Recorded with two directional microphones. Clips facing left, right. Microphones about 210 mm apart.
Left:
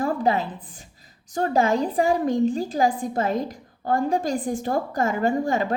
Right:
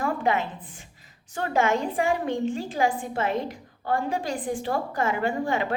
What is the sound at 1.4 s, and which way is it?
A woman's voice, 35° left (ahead or behind).